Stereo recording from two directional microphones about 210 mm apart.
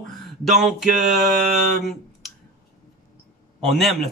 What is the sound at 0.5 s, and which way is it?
Speech, centre (ahead or behind).